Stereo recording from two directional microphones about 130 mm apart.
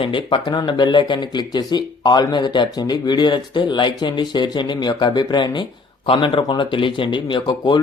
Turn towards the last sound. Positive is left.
turn(degrees=35)  # may be behind; listen again after turning